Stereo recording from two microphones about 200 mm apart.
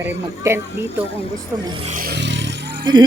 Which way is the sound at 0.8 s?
30° left (ahead or behind).